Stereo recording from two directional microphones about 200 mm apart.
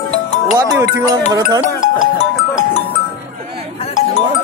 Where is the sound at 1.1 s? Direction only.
20° right (ahead or behind).